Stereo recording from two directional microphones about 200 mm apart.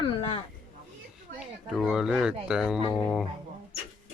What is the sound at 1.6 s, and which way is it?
Speech, centre (ahead or behind).